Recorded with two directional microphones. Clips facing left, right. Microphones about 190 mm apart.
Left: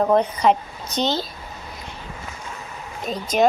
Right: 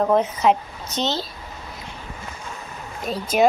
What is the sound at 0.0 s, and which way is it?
Speech, centre (ahead or behind).